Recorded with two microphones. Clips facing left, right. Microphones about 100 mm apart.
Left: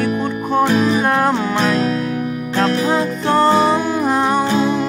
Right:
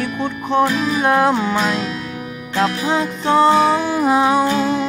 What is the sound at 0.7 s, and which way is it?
Music, 35° left (ahead or behind).